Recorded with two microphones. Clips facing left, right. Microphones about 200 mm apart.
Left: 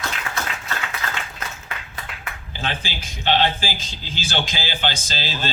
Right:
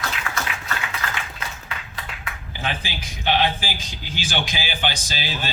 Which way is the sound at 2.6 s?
15° right (ahead or behind).